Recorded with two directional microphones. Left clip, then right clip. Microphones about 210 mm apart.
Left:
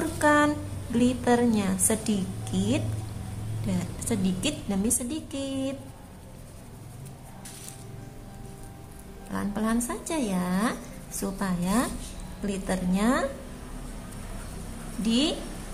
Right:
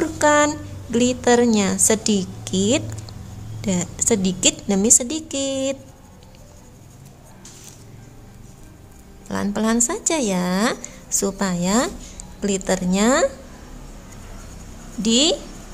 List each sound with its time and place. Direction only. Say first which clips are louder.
0.0 s a sound: right 6 dB; 45° right (ahead or behind)
0.9 s speech: right 7 dB; 45° right (ahead or behind)
9.3 s speech: right 8 dB; 50° right (ahead or behind)
15.0 s speech: right 9 dB; 50° right (ahead or behind)